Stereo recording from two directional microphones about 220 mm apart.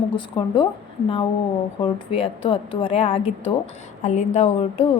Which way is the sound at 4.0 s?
35° left (ahead or behind).